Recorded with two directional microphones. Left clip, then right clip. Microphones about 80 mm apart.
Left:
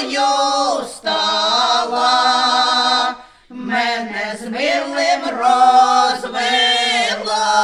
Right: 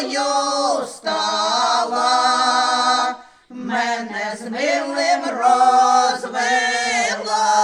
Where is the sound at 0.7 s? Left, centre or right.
Right.